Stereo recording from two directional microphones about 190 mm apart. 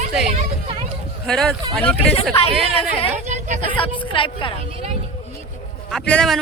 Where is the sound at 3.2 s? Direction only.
40° right (ahead or behind).